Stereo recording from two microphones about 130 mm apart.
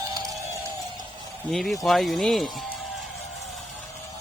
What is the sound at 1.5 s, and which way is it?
Speech, centre (ahead or behind).